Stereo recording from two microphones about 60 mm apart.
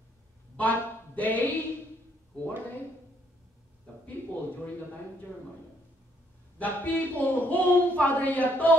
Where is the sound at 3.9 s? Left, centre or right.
Left.